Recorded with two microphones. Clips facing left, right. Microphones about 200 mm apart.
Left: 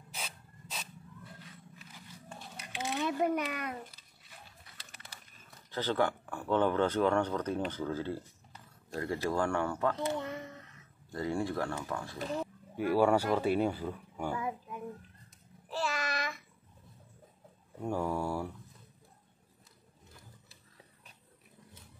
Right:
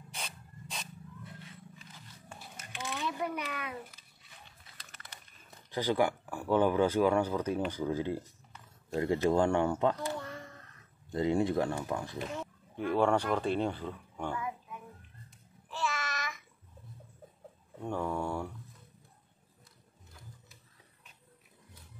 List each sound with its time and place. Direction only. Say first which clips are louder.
0.1 s rub: even; 5° left (ahead or behind)
2.9 s a child's voice: left 5 dB; 45° left (ahead or behind)
5.7 s speech: right 2 dB; 10° right (ahead or behind)
9.9 s a sound: left 3 dB; 20° left (ahead or behind)
11.1 s speech: right 5 dB; 20° right (ahead or behind)
12.2 s speech: left 2 dB; 35° left (ahead or behind)
12.7 s speech: left 1 dB; 5° left (ahead or behind)
15.7 s child singing: left 2 dB; 40° left (ahead or behind)
17.8 s speech: left 1 dB; 10° left (ahead or behind)